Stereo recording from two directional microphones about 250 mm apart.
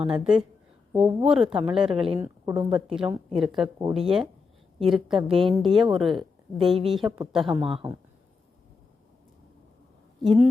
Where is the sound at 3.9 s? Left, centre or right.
Centre.